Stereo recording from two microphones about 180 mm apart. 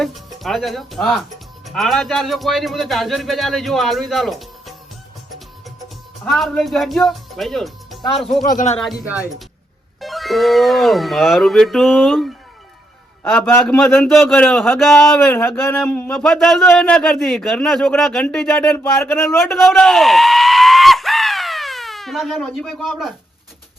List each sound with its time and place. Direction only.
0.0 s speech: centre (ahead or behind)
6.3 s speech: centre (ahead or behind)
8.4 s speech: 45° left (ahead or behind)
8.8 s speech: 5° right (ahead or behind)
13.2 s a man's voice: 10° left (ahead or behind)
15.3 s a man's voice: 10° left (ahead or behind)
19.6 s screaming: centre (ahead or behind)